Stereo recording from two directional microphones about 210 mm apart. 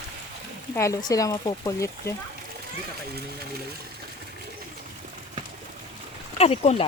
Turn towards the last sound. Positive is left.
turn(degrees=30)  # may be behind; listen again after turning